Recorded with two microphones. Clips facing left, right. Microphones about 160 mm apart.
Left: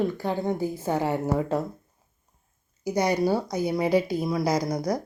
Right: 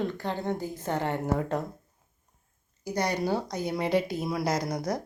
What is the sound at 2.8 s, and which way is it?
A woman's voice, 10° left (ahead or behind).